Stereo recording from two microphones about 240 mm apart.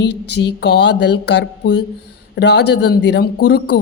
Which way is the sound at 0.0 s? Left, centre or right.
Left.